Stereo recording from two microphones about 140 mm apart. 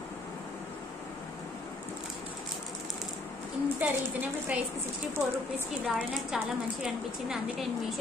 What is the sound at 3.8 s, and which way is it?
Speech, 10° right (ahead or behind).